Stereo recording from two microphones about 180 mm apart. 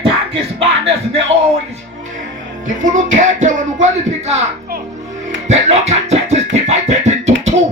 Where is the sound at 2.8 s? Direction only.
45° right (ahead or behind).